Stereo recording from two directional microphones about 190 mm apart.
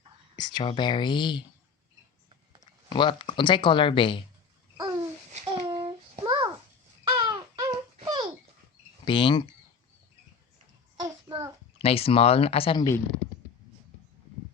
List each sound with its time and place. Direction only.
0.3 s speech: 25° left (ahead or behind)
2.9 s speech: 25° left (ahead or behind)
4.8 s babbling: 20° right (ahead or behind)
5.3 s child singing: 35° right (ahead or behind)
6.1 s a sound: 25° right (ahead or behind)
9.0 s speech: 25° left (ahead or behind)
11.3 s a sound: 20° right (ahead or behind)
11.8 s speech: 30° left (ahead or behind)